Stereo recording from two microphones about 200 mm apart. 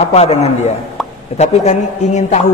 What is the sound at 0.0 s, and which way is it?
Speech, 30° left (ahead or behind).